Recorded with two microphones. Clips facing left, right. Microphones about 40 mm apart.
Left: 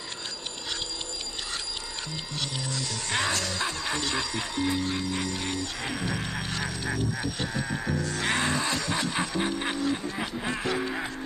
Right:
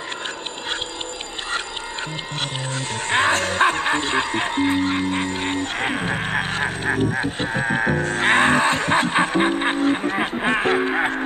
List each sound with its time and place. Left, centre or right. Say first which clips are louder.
2.7 s music: right 10 dB; right